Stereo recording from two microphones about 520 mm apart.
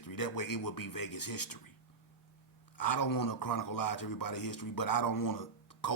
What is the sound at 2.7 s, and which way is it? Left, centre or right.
Speech, left.